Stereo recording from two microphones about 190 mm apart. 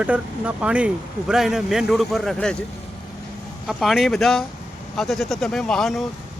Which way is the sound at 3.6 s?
Centre (ahead or behind).